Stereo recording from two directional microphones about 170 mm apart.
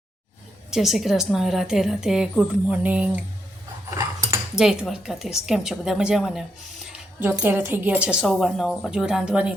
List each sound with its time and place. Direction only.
0.7 s a woman's voice: centre (ahead or behind)
3.8 s a sound: 15° right (ahead or behind)
4.5 s a woman's voice: 5° right (ahead or behind)